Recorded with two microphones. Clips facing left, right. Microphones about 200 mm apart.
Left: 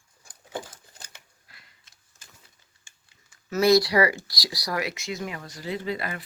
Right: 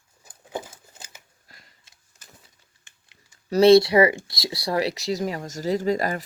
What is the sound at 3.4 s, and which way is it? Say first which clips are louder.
Speech: right 6 dB; 30° right (ahead or behind).